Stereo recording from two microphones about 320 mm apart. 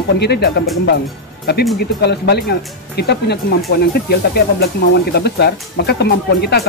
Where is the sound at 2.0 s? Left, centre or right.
Left.